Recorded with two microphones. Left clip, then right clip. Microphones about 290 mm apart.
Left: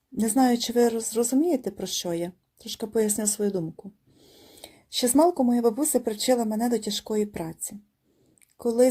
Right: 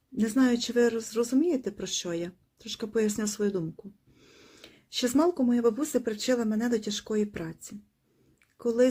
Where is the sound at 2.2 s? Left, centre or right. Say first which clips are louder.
Left 3 dB; centre.